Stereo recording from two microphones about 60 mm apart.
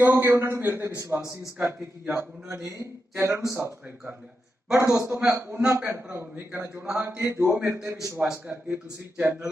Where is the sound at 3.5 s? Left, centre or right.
Right.